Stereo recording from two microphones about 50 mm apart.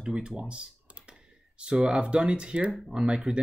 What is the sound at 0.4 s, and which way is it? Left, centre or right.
Computer keyboard, centre.